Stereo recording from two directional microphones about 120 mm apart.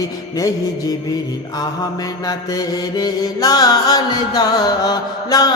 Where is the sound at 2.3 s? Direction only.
35° left (ahead or behind).